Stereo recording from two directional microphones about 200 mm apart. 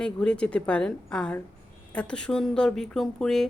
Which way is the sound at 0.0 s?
5° left (ahead or behind).